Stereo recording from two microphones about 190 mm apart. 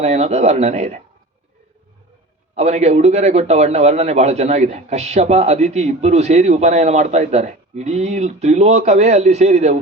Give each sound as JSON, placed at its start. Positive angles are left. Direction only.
{"t": 0.0, "sound": "a man's voice", "side_deg": -35}
{"t": 2.6, "sound": "a man's voice", "side_deg": -35}